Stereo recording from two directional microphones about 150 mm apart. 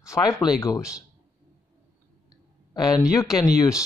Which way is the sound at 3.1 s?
25° left (ahead or behind).